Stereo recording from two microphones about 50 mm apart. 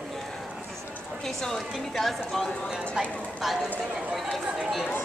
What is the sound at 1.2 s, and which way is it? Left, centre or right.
A woman's voice, centre.